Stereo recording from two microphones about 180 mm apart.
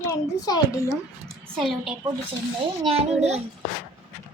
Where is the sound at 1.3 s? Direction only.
Centre (ahead or behind).